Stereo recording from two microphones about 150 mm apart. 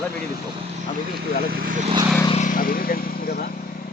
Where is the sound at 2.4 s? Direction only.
70° left (ahead or behind).